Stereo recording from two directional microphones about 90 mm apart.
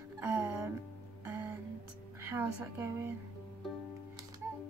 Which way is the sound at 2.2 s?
25° right (ahead or behind).